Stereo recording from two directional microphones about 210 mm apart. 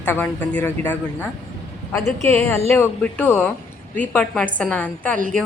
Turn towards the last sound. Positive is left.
turn(degrees=-40)  # may be behind; listen again after turning